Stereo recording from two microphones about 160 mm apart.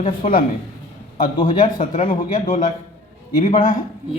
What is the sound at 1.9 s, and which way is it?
Speech, 40° left (ahead or behind).